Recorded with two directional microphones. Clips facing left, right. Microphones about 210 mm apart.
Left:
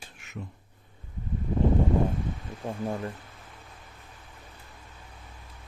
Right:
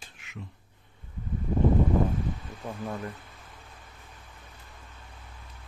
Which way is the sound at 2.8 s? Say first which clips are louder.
Left 3 dB; 30° left (ahead or behind).